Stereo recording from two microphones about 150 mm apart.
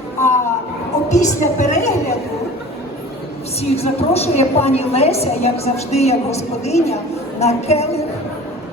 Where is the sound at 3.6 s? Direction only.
45° left (ahead or behind).